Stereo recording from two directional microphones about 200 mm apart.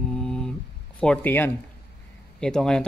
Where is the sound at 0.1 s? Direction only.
5° left (ahead or behind).